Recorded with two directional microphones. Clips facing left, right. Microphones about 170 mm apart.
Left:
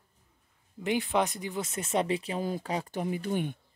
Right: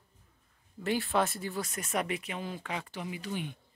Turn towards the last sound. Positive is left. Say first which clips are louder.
# left 6 dB
turn(degrees=50)  # may be behind; listen again after turning